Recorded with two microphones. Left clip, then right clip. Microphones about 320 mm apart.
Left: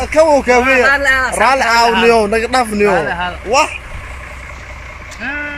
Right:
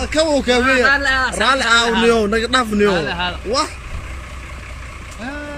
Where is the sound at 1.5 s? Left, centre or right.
Centre.